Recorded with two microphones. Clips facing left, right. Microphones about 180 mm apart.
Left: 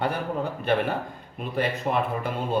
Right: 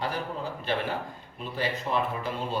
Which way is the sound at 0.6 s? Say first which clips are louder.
Left 5 dB; 60° left (ahead or behind).